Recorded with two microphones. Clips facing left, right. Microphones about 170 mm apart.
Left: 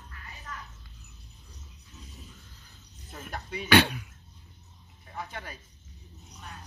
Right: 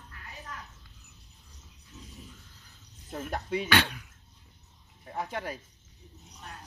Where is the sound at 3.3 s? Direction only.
90° right.